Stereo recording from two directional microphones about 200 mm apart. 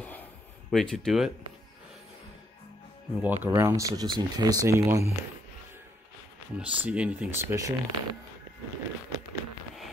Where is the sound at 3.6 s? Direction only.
15° right (ahead or behind).